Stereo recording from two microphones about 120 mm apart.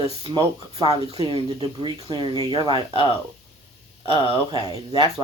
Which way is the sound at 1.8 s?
40° right (ahead or behind).